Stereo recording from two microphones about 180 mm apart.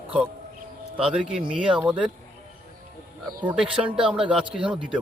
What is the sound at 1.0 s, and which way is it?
Speech, 5° right (ahead or behind).